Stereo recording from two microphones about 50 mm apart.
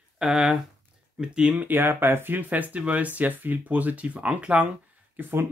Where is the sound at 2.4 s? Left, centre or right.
Right.